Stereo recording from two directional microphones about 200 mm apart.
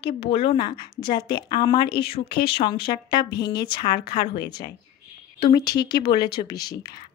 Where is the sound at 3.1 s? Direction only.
20° left (ahead or behind).